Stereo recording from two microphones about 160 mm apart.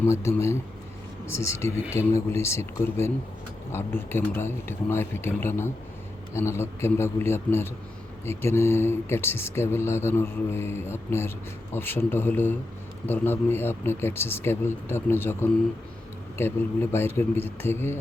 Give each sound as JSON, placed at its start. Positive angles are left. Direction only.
{"t": 0.0, "sound": "speech", "side_deg": 15}